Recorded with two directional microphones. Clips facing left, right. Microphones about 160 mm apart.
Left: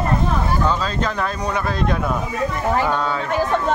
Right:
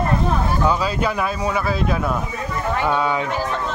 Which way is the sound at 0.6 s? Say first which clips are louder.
Right 1 dB; 10° right (ahead or behind).